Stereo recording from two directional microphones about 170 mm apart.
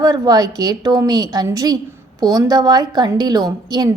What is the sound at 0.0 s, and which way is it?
A woman's voice, 20° right (ahead or behind).